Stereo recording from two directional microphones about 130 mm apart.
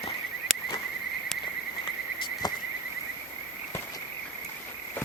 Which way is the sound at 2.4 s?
30° left (ahead or behind).